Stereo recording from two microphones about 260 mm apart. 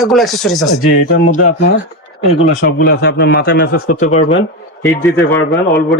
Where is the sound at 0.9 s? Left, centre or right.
Left.